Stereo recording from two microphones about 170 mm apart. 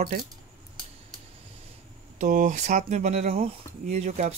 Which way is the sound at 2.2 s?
50° right (ahead or behind).